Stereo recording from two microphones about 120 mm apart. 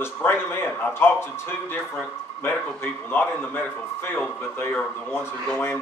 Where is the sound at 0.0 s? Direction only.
20° left (ahead or behind).